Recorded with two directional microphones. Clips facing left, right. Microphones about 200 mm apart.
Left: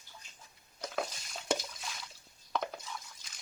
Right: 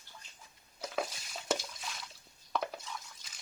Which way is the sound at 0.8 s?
Centre (ahead or behind).